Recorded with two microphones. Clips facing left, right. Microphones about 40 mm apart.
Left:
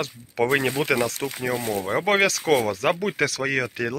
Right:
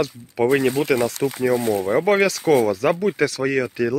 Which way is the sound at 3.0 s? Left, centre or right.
Left.